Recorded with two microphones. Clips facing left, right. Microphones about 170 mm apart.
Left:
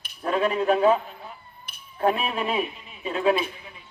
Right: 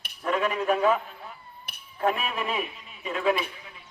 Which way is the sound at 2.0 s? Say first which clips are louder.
Left 3 dB; 30° left (ahead or behind).